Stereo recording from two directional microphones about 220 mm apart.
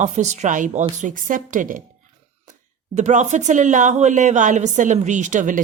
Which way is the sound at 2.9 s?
30° right (ahead or behind).